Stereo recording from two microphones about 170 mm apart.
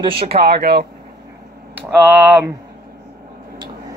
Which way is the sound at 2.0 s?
10° right (ahead or behind).